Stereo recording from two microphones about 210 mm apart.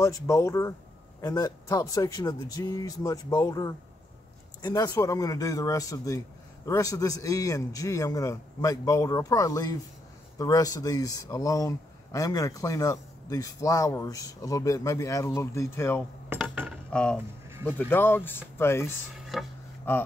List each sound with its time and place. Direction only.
0.0 s speech: 15° left (ahead or behind)
16.3 s dishes: 5° right (ahead or behind)
16.9 s speech: 5° left (ahead or behind)
17.5 s a sound: 10° right (ahead or behind)
17.7 s speech: 10° left (ahead or behind)
19.3 s speech: centre (ahead or behind)
19.9 s speech: 10° left (ahead or behind)